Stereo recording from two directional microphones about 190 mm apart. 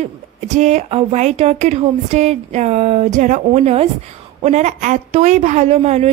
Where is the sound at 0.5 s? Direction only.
40° right (ahead or behind).